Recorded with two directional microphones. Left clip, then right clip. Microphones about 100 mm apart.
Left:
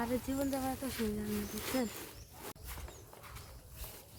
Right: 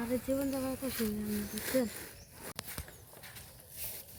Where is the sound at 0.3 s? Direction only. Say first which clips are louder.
Right 4 dB; 35° left (ahead or behind).